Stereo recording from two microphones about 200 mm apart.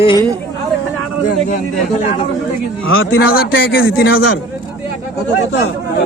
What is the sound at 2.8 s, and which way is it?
Speech, 85° left.